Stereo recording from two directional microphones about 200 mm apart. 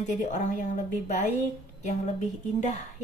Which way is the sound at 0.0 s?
35° left (ahead or behind).